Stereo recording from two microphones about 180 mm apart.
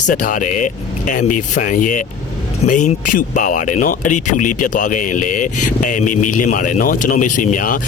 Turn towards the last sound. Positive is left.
turn(degrees=45)  # may be behind; listen again after turning